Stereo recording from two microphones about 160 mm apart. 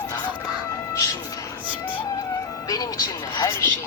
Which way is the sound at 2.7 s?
25° left (ahead or behind).